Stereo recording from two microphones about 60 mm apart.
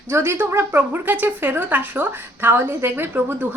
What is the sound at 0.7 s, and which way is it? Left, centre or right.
A woman's voice, right.